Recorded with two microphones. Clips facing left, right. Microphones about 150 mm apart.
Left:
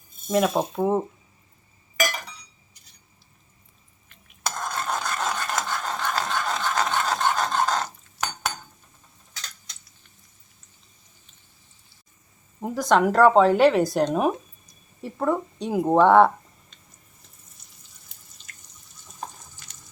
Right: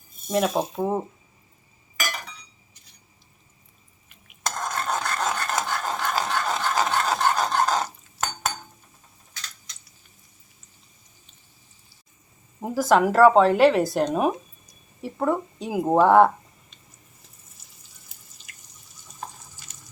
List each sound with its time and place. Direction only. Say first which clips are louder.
0.3 s speech: left 1 dB; centre (ahead or behind)
4.7 s a sound: right 1 dB; centre (ahead or behind)
5.6 s dog: right 1 dB; 5° right (ahead or behind)
12.5 s speech: right 1 dB; 5° right (ahead or behind)
17.6 s a sound: even; 5° right (ahead or behind)
18.5 s drip: left 2 dB; 15° right (ahead or behind)